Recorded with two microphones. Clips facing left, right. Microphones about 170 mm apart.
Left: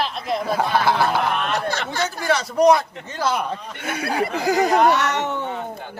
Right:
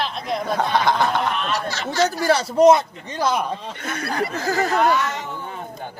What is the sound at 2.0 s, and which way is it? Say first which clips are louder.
A man's voice: right 4 dB; 35° right (ahead or behind).